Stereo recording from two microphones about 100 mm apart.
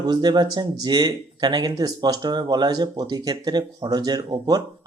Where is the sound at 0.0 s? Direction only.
45° right (ahead or behind).